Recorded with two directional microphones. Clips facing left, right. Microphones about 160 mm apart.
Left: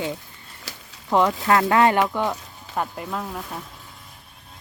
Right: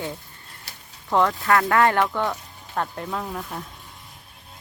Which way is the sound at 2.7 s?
5° left (ahead or behind).